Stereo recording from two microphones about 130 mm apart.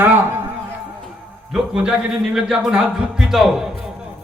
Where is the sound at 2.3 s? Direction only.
5° right (ahead or behind).